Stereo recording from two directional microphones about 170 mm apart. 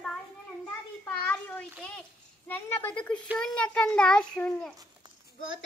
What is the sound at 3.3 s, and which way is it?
A woman's voice, 5° left (ahead or behind).